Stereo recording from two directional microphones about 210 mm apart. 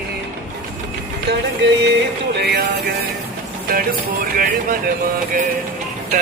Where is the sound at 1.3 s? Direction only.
55° right (ahead or behind).